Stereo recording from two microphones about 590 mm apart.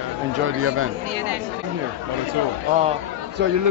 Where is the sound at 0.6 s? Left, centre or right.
Right.